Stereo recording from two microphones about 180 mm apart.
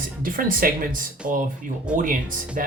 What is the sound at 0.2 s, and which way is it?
Speech, 50° right (ahead or behind).